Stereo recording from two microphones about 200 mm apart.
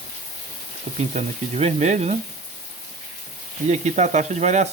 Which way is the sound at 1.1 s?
35° right (ahead or behind).